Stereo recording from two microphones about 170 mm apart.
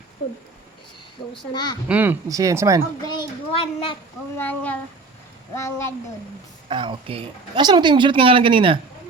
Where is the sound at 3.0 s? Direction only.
30° left (ahead or behind).